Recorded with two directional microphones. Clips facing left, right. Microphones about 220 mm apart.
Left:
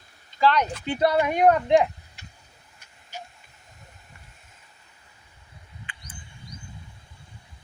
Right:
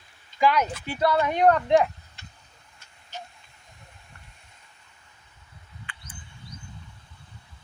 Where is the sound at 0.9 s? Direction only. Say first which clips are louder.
Left 3 dB; 20° left (ahead or behind).